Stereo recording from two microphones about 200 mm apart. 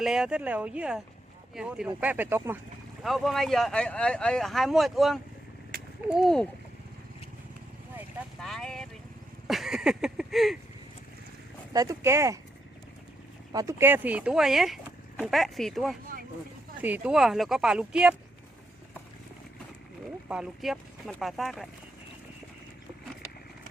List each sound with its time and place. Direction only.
0.0 s speech: 5° right (ahead or behind)
3.0 s speech: centre (ahead or behind)
8.4 s speech: centre (ahead or behind)
9.5 s a sound: centre (ahead or behind)
11.7 s speech: 15° right (ahead or behind)
13.5 s speech: 15° right (ahead or behind)
20.2 s speech: 5° right (ahead or behind)